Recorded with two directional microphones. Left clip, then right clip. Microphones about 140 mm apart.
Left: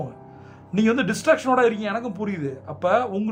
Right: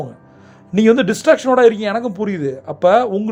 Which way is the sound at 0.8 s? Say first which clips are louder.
Right 9 dB; 35° right (ahead or behind).